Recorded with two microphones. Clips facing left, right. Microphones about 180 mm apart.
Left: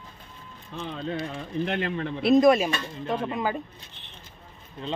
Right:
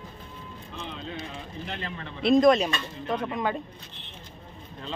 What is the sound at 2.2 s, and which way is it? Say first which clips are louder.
Speech: left 1 dB; 5° left (ahead or behind).